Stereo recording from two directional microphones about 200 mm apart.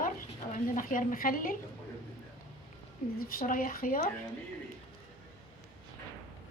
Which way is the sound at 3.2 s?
45° left (ahead or behind).